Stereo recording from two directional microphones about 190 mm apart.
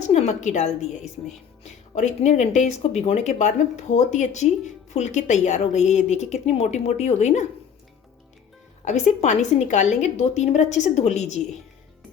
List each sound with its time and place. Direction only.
0.0 s speech: 35° left (ahead or behind)
8.8 s speech: 40° left (ahead or behind)